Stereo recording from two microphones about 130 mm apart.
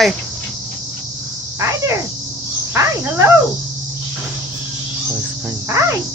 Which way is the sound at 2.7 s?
15° right (ahead or behind).